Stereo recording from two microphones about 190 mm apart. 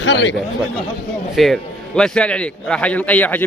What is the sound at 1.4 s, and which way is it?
A man's voice, centre (ahead or behind).